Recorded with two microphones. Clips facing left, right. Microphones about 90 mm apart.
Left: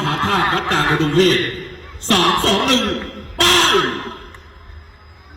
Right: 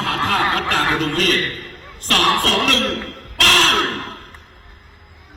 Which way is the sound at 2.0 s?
25° left (ahead or behind).